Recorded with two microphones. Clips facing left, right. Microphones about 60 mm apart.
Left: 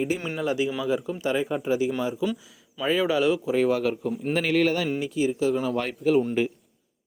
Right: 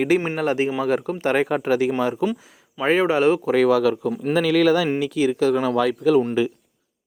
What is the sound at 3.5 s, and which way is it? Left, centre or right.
Speech, right.